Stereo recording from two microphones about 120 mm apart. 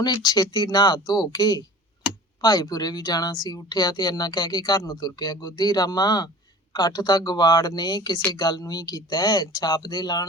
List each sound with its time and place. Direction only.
0.0 s speech: 35° left (ahead or behind)